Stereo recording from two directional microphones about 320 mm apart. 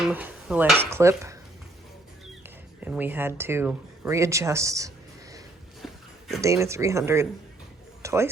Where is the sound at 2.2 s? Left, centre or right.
Centre.